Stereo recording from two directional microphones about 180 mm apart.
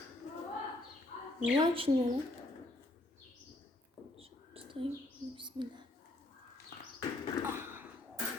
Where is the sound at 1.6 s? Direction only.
30° right (ahead or behind).